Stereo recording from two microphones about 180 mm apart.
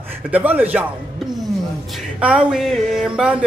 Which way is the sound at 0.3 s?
10° right (ahead or behind).